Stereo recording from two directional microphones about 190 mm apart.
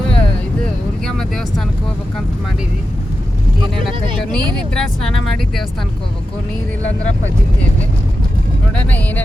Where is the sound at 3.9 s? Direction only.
25° right (ahead or behind).